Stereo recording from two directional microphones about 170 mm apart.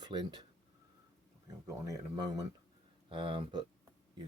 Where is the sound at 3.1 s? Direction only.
30° right (ahead or behind).